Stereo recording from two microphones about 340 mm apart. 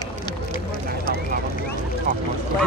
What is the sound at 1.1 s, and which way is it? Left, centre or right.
Vehicle, left.